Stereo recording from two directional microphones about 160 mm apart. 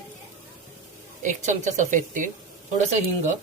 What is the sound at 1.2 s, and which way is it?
A woman's voice, 50° right (ahead or behind).